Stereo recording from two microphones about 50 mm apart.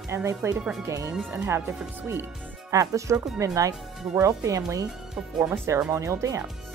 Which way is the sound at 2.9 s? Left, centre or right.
Right.